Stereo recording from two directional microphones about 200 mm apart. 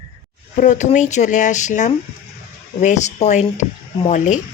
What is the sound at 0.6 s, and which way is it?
A woman's voice, 40° left (ahead or behind).